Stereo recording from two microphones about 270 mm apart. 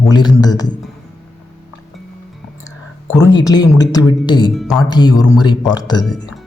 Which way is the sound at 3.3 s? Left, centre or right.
Centre.